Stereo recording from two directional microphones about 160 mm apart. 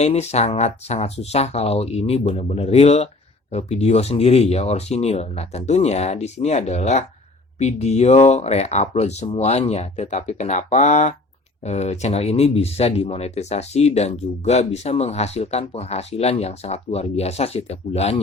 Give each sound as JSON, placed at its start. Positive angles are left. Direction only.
{"t": 0.0, "sound": "speech", "side_deg": 40}